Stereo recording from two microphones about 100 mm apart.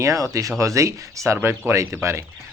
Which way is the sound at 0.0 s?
35° right (ahead or behind).